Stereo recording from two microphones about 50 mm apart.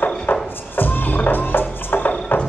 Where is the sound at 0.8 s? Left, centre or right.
Left.